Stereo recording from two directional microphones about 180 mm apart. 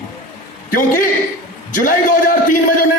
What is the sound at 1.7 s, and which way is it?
Speech, 50° left (ahead or behind).